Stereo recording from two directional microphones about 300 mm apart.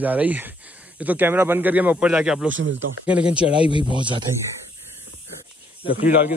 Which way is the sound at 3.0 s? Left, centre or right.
Centre.